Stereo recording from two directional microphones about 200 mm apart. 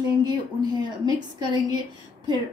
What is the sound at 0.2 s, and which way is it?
A woman's voice, 20° right (ahead or behind).